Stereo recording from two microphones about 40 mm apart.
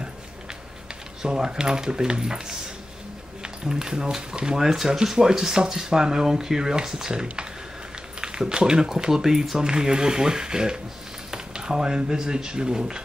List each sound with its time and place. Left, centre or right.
1.2 s speech: centre